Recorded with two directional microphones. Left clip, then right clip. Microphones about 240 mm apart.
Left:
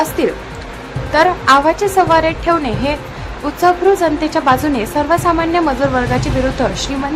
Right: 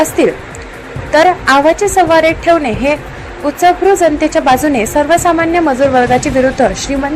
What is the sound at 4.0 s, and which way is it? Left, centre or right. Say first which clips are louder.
A woman's voice: right 5 dB; centre.